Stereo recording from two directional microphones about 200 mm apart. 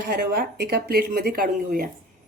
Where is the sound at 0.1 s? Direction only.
50° right (ahead or behind).